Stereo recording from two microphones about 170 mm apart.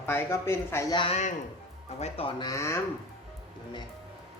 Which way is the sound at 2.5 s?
15° left (ahead or behind).